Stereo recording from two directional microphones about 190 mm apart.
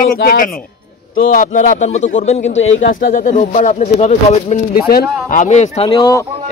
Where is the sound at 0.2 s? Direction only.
45° left (ahead or behind).